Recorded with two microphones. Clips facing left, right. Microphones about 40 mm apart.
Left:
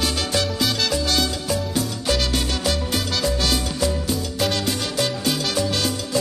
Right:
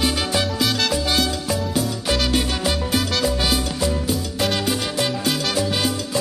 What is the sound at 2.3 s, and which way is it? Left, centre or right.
Music, centre.